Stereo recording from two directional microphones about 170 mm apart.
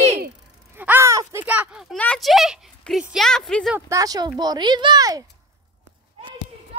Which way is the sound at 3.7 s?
20° right (ahead or behind).